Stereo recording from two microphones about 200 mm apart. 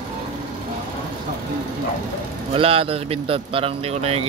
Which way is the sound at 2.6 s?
30° right (ahead or behind).